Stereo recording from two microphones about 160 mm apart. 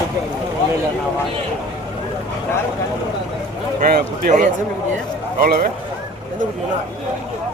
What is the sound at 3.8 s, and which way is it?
Speech, 60° right (ahead or behind).